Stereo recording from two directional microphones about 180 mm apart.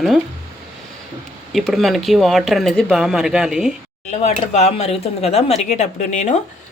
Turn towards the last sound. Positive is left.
turn(degrees=40)  # may be behind; listen again after turning